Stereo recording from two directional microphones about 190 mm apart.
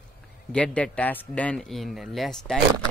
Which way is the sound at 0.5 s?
5° left (ahead or behind).